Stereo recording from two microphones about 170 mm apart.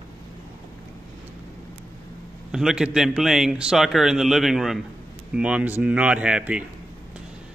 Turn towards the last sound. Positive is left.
turn(degrees=-5)  # may be behind; listen again after turning